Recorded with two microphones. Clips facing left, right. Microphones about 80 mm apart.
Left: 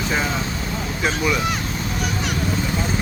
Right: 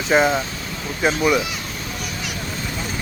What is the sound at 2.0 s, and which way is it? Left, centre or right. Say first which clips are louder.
Vehicle: left 7 dB; left.